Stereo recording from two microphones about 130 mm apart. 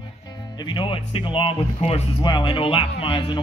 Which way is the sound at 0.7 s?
45° left (ahead or behind).